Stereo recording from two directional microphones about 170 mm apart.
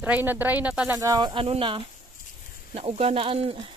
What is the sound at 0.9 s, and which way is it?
Speech, 20° right (ahead or behind).